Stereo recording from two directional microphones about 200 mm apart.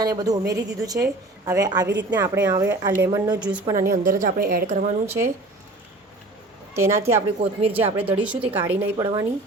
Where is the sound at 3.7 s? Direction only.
45° right (ahead or behind).